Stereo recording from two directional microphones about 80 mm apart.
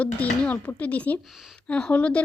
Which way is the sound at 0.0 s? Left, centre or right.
Centre.